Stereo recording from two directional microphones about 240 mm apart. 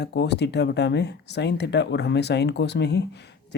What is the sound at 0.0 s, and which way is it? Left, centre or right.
Speech, left.